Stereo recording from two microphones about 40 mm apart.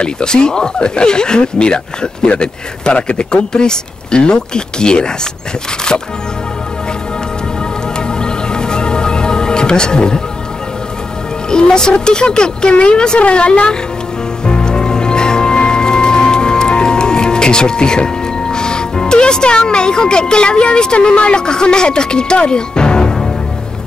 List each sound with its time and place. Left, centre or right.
0.0 s speech: left
8.1 s music: centre
11.5 s speech: centre
14.4 s music: left
21.4 s speech: centre